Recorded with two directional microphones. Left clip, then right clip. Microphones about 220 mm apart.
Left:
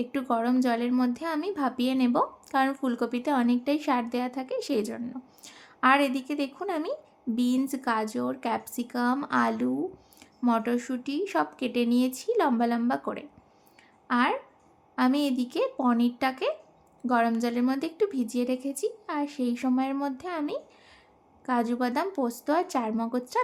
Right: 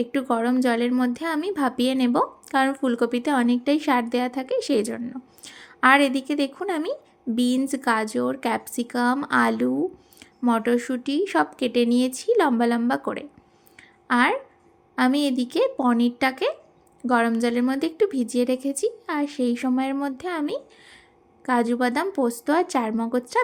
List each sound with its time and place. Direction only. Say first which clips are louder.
0.0 s a woman's voice: right 4 dB; 10° right (ahead or behind)